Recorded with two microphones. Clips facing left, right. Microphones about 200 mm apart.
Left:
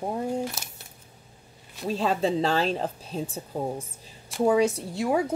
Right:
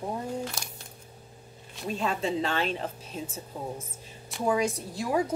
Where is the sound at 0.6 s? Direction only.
5° left (ahead or behind).